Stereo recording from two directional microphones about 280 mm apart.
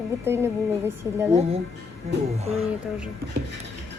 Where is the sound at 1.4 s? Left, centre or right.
Right.